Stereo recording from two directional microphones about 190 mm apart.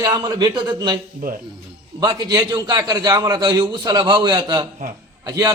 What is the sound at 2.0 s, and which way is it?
A man's voice, 20° right (ahead or behind).